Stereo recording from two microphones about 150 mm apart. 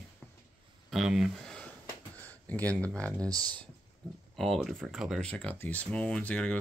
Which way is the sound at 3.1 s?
25° right (ahead or behind).